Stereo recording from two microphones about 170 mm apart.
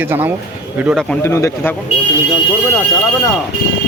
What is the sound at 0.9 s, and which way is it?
Speech, 10° left (ahead or behind).